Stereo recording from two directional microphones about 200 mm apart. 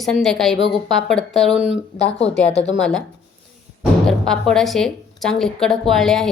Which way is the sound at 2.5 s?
30° left (ahead or behind).